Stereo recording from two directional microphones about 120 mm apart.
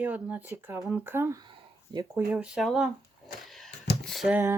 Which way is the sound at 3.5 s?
Centre (ahead or behind).